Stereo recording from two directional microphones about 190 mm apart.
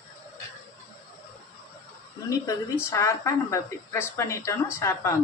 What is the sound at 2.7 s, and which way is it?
Speech, 15° left (ahead or behind).